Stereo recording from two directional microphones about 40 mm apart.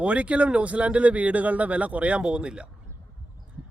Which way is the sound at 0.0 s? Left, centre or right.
Right.